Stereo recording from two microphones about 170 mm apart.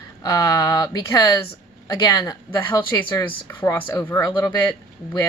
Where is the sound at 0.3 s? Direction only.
20° left (ahead or behind).